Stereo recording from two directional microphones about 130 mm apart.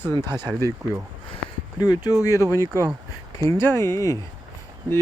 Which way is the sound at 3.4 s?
20° left (ahead or behind).